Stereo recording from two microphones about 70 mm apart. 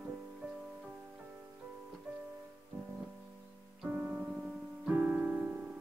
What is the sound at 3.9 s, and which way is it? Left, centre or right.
Music, right.